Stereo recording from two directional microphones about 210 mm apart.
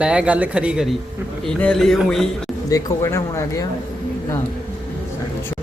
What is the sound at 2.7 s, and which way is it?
Speech, 15° left (ahead or behind).